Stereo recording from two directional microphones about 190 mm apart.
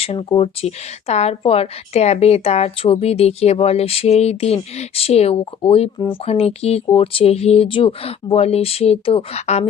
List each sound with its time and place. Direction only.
0.0 s speech: 30° left (ahead or behind)